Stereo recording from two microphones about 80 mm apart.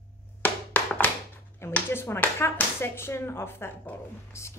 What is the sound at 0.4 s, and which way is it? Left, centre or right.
Music, left.